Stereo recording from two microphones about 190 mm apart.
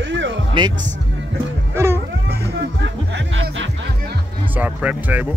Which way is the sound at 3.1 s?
90° right.